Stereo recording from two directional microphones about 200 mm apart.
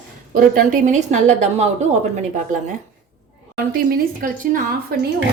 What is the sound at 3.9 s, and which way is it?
A woman's voice, 45° right (ahead or behind).